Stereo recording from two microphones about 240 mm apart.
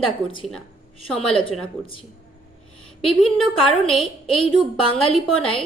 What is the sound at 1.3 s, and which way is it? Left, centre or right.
Speech, left.